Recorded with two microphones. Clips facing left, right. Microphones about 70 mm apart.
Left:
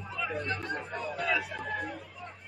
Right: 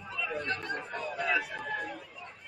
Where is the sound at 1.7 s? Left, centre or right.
Centre.